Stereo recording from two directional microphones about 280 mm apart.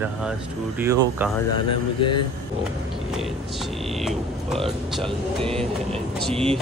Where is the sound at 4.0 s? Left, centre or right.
Centre.